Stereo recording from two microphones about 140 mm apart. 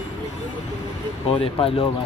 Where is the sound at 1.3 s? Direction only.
40° left (ahead or behind).